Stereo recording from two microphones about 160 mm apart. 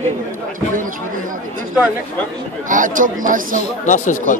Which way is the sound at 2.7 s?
55° right (ahead or behind).